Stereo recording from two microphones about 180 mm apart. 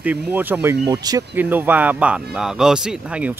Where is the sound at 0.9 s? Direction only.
20° right (ahead or behind).